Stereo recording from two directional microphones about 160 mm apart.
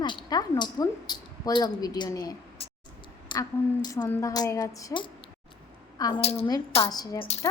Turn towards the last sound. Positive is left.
turn(degrees=25)  # may be behind; listen again after turning